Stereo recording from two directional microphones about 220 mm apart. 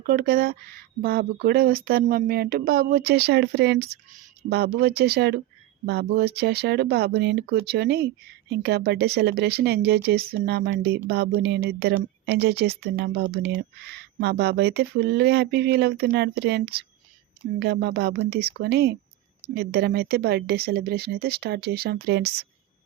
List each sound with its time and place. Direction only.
0.0 s speech: 40° right (ahead or behind)